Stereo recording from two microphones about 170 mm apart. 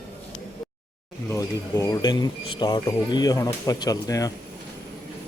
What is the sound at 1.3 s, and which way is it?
Speech, 20° left (ahead or behind).